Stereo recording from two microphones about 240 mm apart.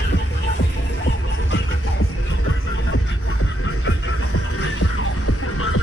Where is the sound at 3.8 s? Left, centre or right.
Left.